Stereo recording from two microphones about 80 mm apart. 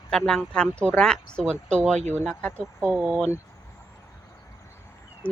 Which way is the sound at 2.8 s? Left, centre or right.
Right.